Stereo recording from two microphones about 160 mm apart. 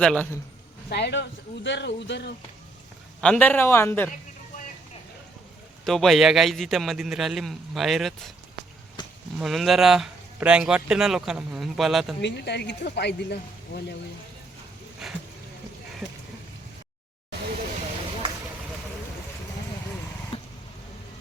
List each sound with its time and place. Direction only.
0.0 s speech: 5° left (ahead or behind)
0.9 s speech: 90° left
3.2 s a man's voice: 5° left (ahead or behind)
5.8 s speech: centre (ahead or behind)
9.4 s speech: centre (ahead or behind)
12.2 s speech: 90° left
15.0 s speech: 5° right (ahead or behind)